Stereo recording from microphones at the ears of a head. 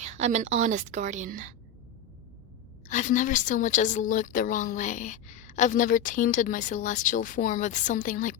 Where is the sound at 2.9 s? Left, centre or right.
Left.